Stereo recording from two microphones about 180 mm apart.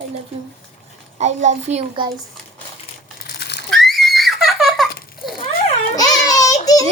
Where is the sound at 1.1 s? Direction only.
40° right (ahead or behind).